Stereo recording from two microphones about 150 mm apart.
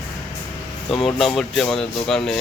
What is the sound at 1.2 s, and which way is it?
Speech, centre (ahead or behind).